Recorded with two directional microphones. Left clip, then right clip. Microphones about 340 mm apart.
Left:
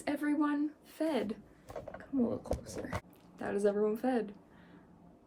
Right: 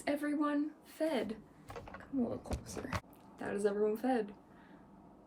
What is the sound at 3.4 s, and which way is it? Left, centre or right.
Speech, centre.